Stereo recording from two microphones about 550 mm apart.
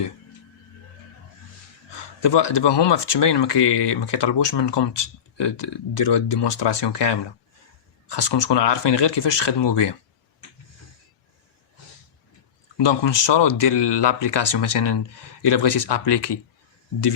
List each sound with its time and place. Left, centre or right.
1.9 s speech: left
12.7 s speech: left